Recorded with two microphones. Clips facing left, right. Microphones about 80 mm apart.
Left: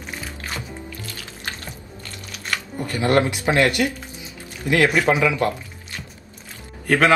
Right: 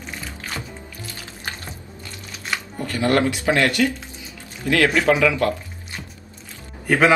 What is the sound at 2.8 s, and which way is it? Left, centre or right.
A man's voice, left.